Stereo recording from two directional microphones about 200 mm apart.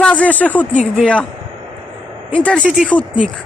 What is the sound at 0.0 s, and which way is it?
Speech, 5° left (ahead or behind).